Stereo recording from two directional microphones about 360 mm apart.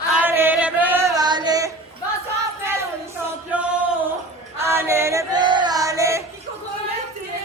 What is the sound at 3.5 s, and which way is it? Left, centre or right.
Music, centre.